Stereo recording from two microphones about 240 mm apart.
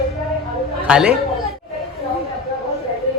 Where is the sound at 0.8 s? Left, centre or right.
Centre.